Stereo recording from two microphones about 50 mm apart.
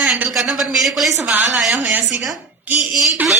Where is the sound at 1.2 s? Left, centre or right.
Right.